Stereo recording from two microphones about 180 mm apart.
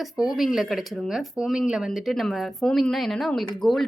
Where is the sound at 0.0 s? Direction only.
Centre (ahead or behind).